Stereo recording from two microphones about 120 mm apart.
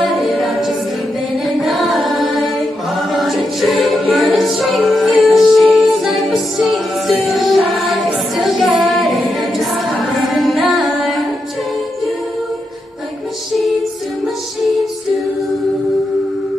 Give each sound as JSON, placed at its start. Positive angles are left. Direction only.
{"t": 0.0, "sound": "a capella", "side_deg": 0}
{"t": 1.4, "sound": "music", "side_deg": 0}
{"t": 2.9, "sound": "choir", "side_deg": 0}
{"t": 8.4, "sound": "a capella", "side_deg": 0}
{"t": 10.6, "sound": "music", "side_deg": 0}